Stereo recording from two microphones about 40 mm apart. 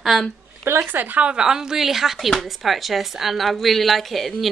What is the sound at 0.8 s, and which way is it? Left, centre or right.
Speech, right.